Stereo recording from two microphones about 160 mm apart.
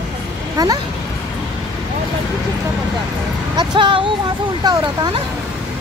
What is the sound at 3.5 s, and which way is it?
Speech, 30° right (ahead or behind).